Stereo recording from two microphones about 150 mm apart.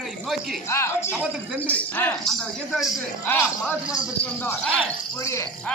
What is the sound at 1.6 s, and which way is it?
Speech, 10° left (ahead or behind).